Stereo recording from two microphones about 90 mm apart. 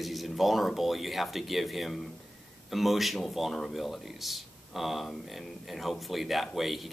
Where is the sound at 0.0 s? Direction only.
Centre (ahead or behind).